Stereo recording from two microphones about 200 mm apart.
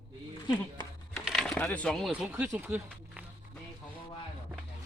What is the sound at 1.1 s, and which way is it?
Speech, centre (ahead or behind).